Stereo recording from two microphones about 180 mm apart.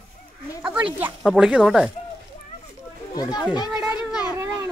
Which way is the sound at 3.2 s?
20° left (ahead or behind).